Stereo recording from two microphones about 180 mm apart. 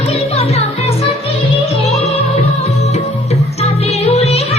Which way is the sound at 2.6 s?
35° left (ahead or behind).